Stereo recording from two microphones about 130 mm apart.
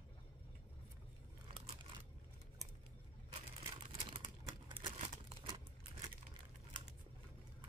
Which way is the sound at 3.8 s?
50° right (ahead or behind).